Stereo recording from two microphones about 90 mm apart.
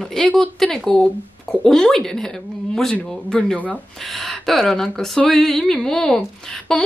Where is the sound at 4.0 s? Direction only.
Centre (ahead or behind).